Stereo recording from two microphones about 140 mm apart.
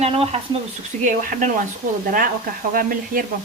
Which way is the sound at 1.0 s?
70° right (ahead or behind).